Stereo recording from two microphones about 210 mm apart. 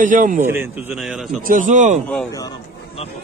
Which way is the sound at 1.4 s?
35° right (ahead or behind).